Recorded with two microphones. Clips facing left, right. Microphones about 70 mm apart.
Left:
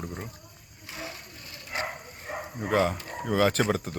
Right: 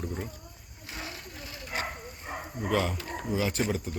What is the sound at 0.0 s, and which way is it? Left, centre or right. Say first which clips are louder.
Speech: right 2 dB; centre.